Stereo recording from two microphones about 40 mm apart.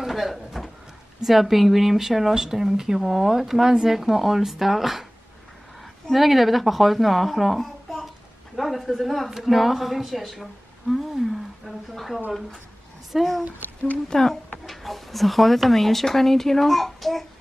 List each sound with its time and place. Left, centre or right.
0.0 s a sound: centre
1.2 s speech: centre
6.1 s speech: centre
14.0 s speech: centre
14.7 s speech: centre